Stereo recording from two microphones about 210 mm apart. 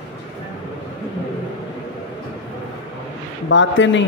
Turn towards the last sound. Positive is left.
turn(degrees=60)  # may be behind; listen again after turning